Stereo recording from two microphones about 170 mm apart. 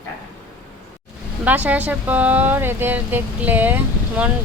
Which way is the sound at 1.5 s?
10° right (ahead or behind).